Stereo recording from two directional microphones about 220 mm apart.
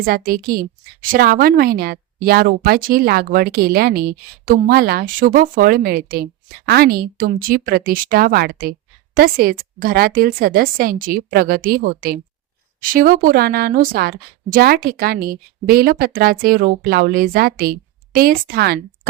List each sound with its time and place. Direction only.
0.0 s a woman's voice: 40° right (ahead or behind)